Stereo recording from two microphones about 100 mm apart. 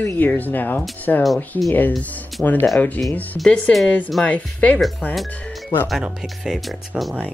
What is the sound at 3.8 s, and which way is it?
Speech, 15° left (ahead or behind).